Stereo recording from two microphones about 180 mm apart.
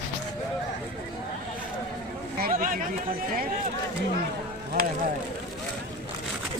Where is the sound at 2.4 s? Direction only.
50° right (ahead or behind).